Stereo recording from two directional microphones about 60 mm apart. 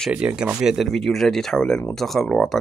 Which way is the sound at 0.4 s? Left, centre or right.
Centre.